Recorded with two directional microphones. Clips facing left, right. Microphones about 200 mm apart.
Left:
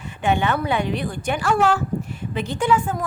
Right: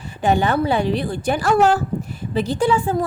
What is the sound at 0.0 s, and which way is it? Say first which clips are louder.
A woman's voice: right 3 dB; 35° right (ahead or behind).